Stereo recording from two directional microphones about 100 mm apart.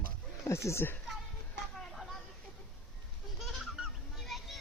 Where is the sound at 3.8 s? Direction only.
5° right (ahead or behind).